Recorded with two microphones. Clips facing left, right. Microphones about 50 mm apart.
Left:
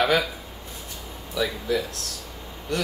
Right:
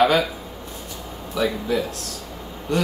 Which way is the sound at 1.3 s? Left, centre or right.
Right.